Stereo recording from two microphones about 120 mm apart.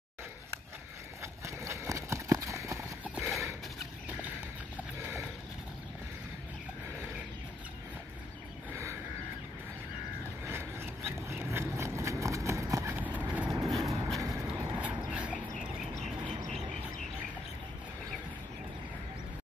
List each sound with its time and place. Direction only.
1.2 s clip-clop: 25° right (ahead or behind)
10.4 s a sound: 20° right (ahead or behind)
11.2 s horse: 20° right (ahead or behind)
13.7 s vehicle: centre (ahead or behind)
14.2 s horse: 30° right (ahead or behind)
14.8 s dog: 10° right (ahead or behind)